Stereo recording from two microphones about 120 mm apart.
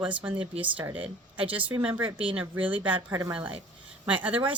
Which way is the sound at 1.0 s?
45° right (ahead or behind).